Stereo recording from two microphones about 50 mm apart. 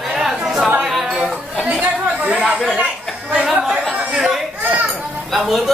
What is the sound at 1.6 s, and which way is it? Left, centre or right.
Chatter, right.